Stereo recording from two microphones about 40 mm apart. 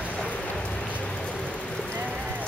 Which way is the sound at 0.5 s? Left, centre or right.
Centre.